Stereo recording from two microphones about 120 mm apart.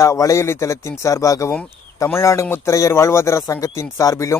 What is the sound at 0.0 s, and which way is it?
Speech, 25° left (ahead or behind).